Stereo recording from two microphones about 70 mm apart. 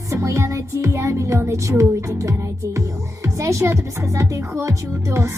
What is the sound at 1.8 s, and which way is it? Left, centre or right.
Speech, right.